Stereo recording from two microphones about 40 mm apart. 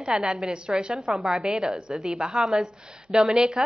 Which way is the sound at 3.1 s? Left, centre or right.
Centre.